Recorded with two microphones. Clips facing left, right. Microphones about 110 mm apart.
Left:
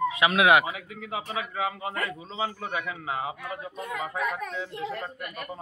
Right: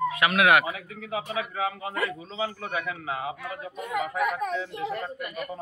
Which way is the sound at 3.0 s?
30° left (ahead or behind).